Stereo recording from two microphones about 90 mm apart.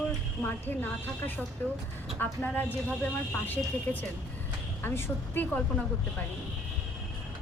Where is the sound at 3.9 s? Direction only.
20° left (ahead or behind).